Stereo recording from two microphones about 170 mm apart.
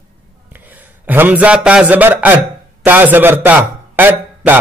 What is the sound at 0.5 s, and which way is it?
A man's voice, 10° right (ahead or behind).